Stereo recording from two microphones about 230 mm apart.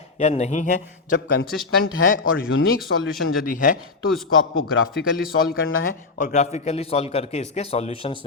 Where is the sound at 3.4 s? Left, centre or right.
Left.